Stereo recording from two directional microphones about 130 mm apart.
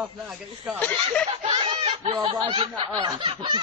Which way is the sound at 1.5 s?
40° right (ahead or behind).